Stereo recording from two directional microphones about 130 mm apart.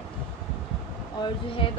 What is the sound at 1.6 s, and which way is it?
Speech, 45° left (ahead or behind).